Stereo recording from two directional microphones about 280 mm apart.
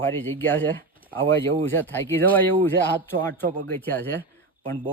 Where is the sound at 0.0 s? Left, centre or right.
Centre.